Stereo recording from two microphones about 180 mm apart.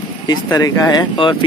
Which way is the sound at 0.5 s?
20° left (ahead or behind).